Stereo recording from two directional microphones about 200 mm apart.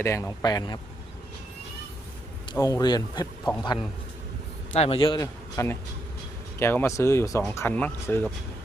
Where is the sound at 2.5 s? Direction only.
15° left (ahead or behind).